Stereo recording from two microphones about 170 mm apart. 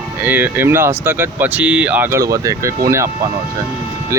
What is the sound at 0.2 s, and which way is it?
Speech, 10° right (ahead or behind).